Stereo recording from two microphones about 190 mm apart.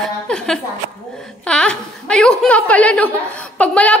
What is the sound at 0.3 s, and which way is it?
A woman's voice, 5° left (ahead or behind).